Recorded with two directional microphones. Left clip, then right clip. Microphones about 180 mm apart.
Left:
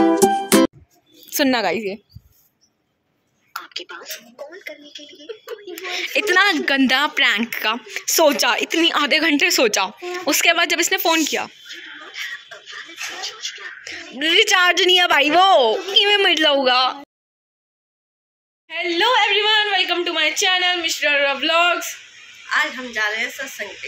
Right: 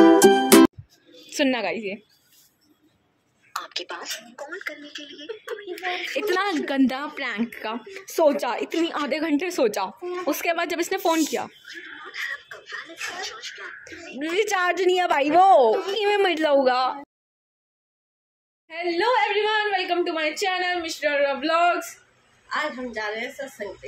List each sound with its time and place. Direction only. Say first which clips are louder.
0.2 s music: right 1 dB; centre (ahead or behind)
1.5 s a woman's voice: left 6 dB; 20° left (ahead or behind)
3.5 s speech: even; centre (ahead or behind)
12.1 s music: left 1 dB; centre (ahead or behind)
13.8 s speech: left 11 dB; centre (ahead or behind)
18.7 s speech: left 5 dB; centre (ahead or behind)
22.5 s a woman's voice: left 7 dB; 15° right (ahead or behind)